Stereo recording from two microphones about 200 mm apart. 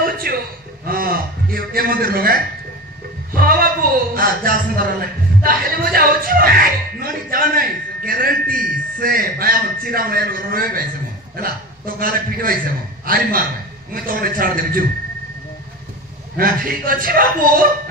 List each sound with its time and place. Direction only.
0.3 s speech: 50° right (ahead or behind)
3.3 s a sound: 45° right (ahead or behind)
4.1 s speech: 45° right (ahead or behind)
16.3 s speech: 45° right (ahead or behind)